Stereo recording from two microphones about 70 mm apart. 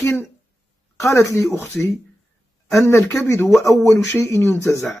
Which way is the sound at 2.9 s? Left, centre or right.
Left.